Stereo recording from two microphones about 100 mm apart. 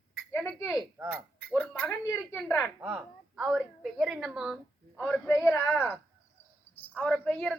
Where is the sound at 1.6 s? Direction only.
15° left (ahead or behind).